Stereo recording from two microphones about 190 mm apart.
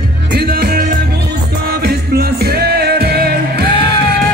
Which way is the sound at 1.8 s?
55° right (ahead or behind).